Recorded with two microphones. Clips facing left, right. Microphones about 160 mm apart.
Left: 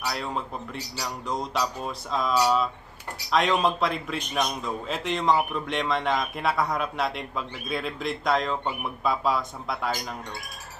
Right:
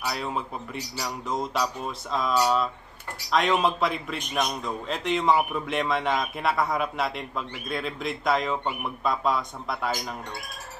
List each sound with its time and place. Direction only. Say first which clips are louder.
0.0 s a man's voice: even; centre (ahead or behind)